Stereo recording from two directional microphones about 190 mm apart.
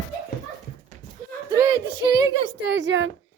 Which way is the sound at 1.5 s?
20° right (ahead or behind).